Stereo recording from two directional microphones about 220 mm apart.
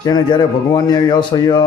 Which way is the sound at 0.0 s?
20° left (ahead or behind).